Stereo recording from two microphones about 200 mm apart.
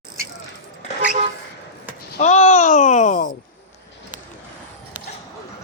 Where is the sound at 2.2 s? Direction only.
35° left (ahead or behind).